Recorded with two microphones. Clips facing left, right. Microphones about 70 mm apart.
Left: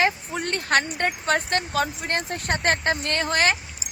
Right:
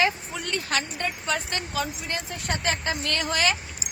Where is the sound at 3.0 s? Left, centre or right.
Left.